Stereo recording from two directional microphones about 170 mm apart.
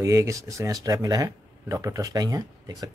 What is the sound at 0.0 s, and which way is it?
Speech, 20° right (ahead or behind).